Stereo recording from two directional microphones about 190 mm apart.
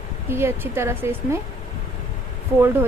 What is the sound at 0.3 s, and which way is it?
A woman's voice, 10° right (ahead or behind).